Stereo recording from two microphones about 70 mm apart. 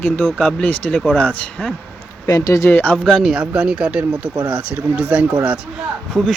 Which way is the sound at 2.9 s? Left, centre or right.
Centre.